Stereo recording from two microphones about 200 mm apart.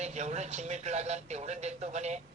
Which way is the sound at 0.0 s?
35° right (ahead or behind).